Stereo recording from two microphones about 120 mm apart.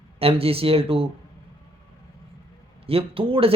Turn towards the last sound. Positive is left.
turn(degrees=-50)  # may be behind; listen again after turning